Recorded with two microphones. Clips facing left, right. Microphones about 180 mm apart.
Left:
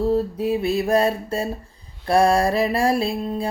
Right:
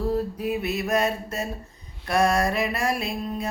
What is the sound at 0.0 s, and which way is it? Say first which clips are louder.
Mantra: left 5 dB; 25° left (ahead or behind).